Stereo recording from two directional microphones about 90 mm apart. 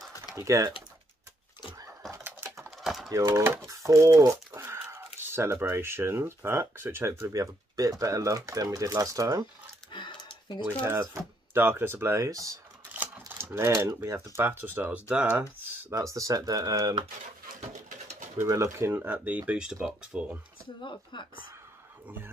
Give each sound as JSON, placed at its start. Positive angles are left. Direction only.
{"t": 0.4, "sound": "speech", "side_deg": -35}
{"t": 2.2, "sound": "typing", "side_deg": -25}
{"t": 2.8, "sound": "typing", "side_deg": -5}
{"t": 3.3, "sound": "speech", "side_deg": -35}
{"t": 9.9, "sound": "a sound", "side_deg": 65}
{"t": 11.5, "sound": "speech", "side_deg": -25}
{"t": 12.3, "sound": "speech", "side_deg": -40}
{"t": 12.9, "sound": "speech", "side_deg": -20}
{"t": 15.9, "sound": "speech", "side_deg": -35}
{"t": 18.0, "sound": "speech", "side_deg": -35}
{"t": 20.8, "sound": "speech", "side_deg": 60}